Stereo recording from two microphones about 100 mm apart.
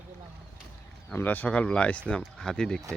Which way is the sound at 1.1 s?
15° left (ahead or behind).